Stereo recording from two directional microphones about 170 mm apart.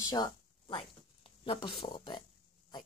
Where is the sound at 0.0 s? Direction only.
25° left (ahead or behind).